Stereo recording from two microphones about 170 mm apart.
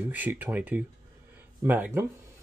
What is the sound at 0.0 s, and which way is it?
Speech, 10° right (ahead or behind).